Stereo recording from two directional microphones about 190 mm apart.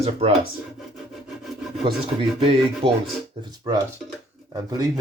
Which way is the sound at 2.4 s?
30° right (ahead or behind).